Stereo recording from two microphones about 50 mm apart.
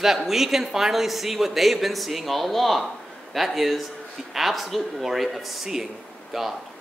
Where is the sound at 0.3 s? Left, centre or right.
Centre.